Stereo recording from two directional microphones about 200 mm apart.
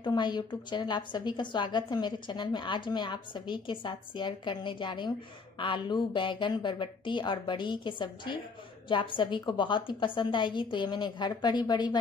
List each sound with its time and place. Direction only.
0.0 s a woman's voice: 20° left (ahead or behind)